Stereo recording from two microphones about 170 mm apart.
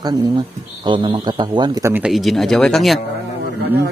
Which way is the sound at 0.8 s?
30° right (ahead or behind).